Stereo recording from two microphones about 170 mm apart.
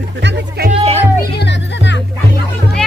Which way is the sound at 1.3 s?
90° left.